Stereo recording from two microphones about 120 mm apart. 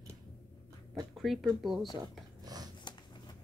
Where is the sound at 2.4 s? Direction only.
30° right (ahead or behind).